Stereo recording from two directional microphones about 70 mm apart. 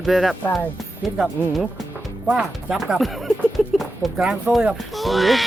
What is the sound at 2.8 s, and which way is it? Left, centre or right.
Speech, centre.